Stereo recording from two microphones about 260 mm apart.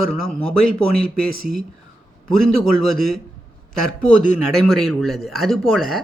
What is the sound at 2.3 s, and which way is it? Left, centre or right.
Speech, right.